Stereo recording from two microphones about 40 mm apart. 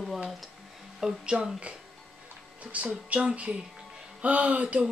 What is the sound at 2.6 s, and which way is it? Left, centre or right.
Speech, right.